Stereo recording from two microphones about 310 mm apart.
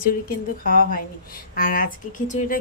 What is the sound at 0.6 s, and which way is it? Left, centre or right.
A woman's voice, left.